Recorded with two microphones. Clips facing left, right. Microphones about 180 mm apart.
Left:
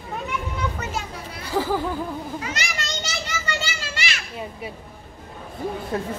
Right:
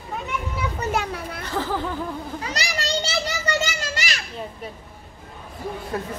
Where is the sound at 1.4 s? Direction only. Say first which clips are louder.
Left 4 dB; 10° left (ahead or behind).